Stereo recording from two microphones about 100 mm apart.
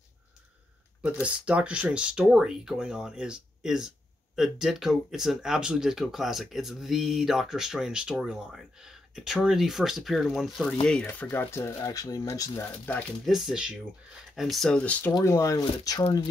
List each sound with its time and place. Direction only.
1.2 s speech: 10° right (ahead or behind)
11.3 s speech: 25° left (ahead or behind)
13.2 s speech: centre (ahead or behind)
14.8 s speech: 15° left (ahead or behind)
15.2 s speech: 30° left (ahead or behind)